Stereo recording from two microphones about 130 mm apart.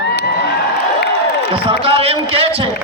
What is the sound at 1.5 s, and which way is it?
A man's voice, 45° right (ahead or behind).